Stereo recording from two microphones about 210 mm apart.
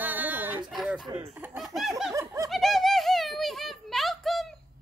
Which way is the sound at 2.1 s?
15° right (ahead or behind).